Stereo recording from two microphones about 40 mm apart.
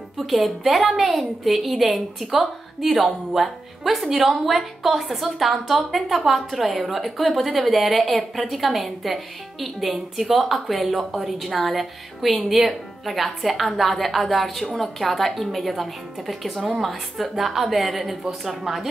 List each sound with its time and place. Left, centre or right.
0.2 s a woman's voice: centre